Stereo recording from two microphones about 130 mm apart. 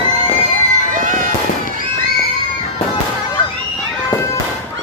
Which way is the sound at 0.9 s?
90° right.